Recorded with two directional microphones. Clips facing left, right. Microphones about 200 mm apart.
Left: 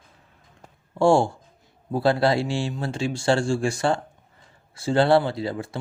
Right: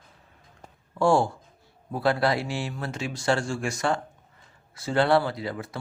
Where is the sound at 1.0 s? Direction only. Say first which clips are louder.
Left 3 dB; 25° left (ahead or behind).